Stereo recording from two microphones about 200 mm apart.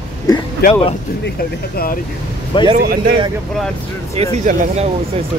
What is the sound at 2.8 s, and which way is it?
Speech, 50° right (ahead or behind).